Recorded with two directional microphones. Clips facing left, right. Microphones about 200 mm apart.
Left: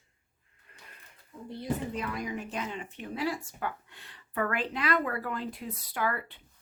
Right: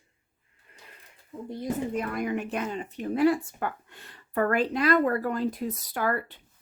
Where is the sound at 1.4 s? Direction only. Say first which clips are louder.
Right 3 dB; 45° right (ahead or behind); by 2.6 s 65° right (ahead or behind).